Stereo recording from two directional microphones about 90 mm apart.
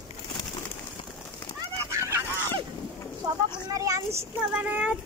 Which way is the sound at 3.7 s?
40° right (ahead or behind).